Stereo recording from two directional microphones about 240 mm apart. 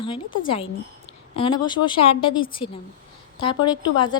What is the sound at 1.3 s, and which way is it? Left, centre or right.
Speech, left.